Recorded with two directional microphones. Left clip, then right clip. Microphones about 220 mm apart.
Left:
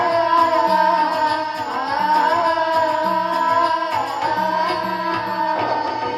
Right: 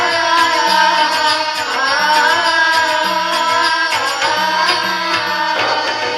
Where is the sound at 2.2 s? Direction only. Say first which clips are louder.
Right 5 dB; 30° right (ahead or behind).